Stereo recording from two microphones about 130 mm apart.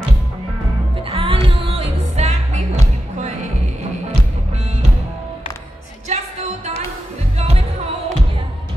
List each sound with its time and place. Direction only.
1.1 s music: 45° right (ahead or behind); by 3.3 s 60° right (ahead or behind)
6.0 s music: 60° right (ahead or behind)